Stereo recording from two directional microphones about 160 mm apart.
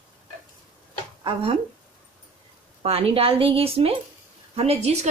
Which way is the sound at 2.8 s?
40° right (ahead or behind).